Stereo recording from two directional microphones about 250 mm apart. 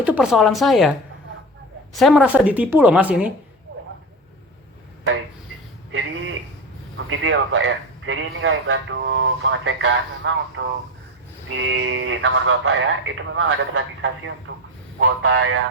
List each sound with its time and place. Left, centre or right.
0.0 s speech: centre
5.9 s a sound: right
7.1 s a man's voice: right